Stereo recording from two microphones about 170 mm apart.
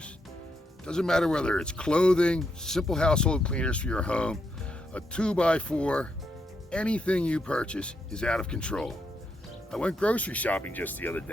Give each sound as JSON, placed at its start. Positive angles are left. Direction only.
{"t": 0.9, "sound": "speech", "side_deg": 5}